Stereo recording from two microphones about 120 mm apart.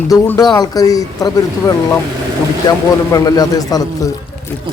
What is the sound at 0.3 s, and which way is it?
A man's voice, 35° left (ahead or behind).